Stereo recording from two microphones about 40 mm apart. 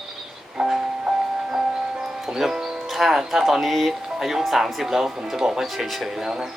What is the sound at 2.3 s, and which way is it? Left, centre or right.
Music, centre.